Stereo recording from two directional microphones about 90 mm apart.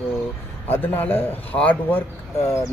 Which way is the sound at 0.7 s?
25° left (ahead or behind).